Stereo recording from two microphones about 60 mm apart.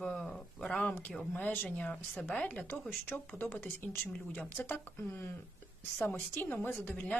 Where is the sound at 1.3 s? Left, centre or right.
Left.